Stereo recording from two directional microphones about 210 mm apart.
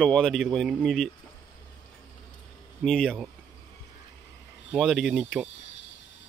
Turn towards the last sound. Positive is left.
turn(degrees=0)  # may be behind; listen again after turning